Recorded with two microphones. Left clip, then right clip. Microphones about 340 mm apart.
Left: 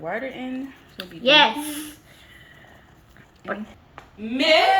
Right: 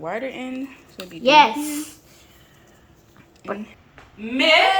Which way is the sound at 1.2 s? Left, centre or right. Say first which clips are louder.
Right 2 dB; right.